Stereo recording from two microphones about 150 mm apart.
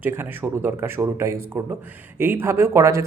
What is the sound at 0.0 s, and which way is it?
Speech, 15° right (ahead or behind).